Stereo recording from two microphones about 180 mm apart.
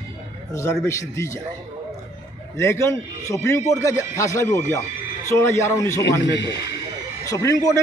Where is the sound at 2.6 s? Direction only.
15° left (ahead or behind).